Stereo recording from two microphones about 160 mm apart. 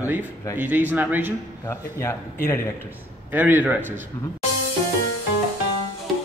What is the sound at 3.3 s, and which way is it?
Speech, 10° right (ahead or behind).